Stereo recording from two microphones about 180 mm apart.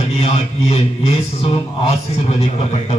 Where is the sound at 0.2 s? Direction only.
35° left (ahead or behind).